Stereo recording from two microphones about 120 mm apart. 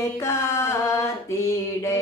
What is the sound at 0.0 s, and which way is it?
Mantra, 25° left (ahead or behind).